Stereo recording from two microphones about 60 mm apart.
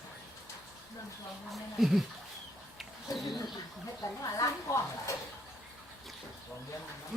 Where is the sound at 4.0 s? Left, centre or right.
Left.